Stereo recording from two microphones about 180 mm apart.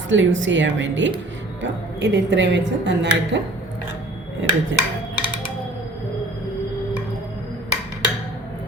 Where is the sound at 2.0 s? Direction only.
75° right (ahead or behind).